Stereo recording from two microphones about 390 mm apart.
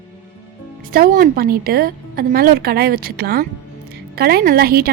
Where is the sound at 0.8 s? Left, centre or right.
Right.